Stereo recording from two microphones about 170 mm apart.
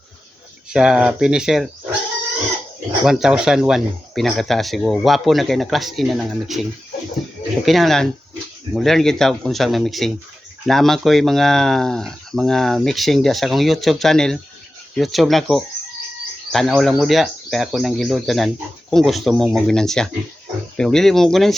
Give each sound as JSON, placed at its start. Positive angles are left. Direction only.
{"t": 0.7, "sound": "speech", "side_deg": -5}
{"t": 3.0, "sound": "speech", "side_deg": -5}